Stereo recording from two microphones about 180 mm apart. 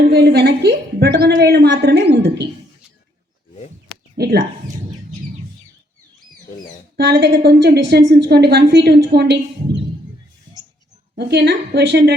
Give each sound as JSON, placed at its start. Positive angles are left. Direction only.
{"t": 0.1, "sound": "a woman's voice", "side_deg": -65}
{"t": 4.2, "sound": "speech", "side_deg": -60}
{"t": 6.9, "sound": "a woman's voice", "side_deg": -65}
{"t": 11.1, "sound": "a woman's voice", "side_deg": -65}